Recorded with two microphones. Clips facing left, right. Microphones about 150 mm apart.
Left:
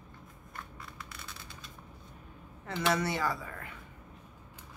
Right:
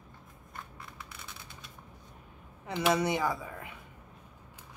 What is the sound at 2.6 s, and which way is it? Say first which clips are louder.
Speech: right 3 dB; 15° right (ahead or behind).